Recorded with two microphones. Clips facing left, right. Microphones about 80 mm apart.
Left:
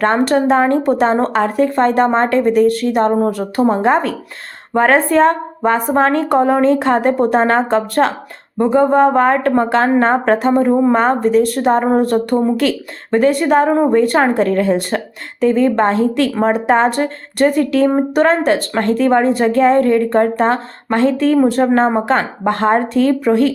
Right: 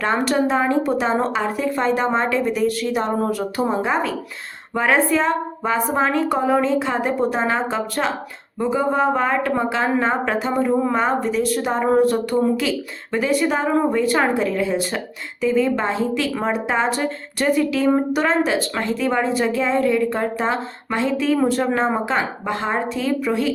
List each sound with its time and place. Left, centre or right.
0.0 s speech: left
11.8 s a woman's voice: left
12.0 s speech: left
21.6 s a woman's voice: left
22.0 s speech: left